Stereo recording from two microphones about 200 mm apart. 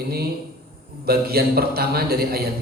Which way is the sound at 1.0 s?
50° right (ahead or behind).